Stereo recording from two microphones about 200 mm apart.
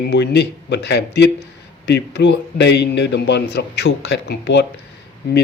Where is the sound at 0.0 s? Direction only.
55° left (ahead or behind).